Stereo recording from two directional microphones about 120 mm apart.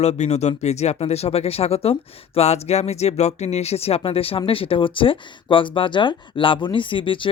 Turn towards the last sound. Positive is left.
turn(degrees=45)  # may be behind; listen again after turning